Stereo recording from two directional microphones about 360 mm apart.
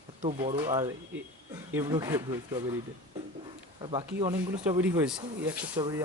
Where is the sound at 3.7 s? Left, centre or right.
Centre.